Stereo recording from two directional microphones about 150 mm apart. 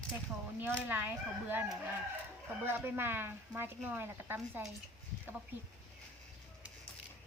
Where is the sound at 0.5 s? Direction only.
15° right (ahead or behind).